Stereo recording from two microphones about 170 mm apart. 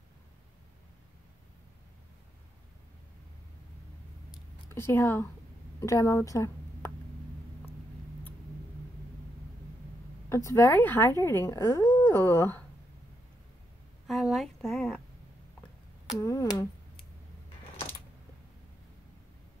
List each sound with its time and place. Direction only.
4.3 s a sound: 15° left (ahead or behind)
5.8 s a woman's voice: 15° left (ahead or behind)
10.3 s a woman's voice: 15° left (ahead or behind)
14.0 s speech: centre (ahead or behind)
16.2 s speech: 20° left (ahead or behind)